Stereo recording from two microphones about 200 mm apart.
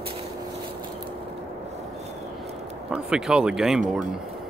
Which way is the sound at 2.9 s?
5° right (ahead or behind).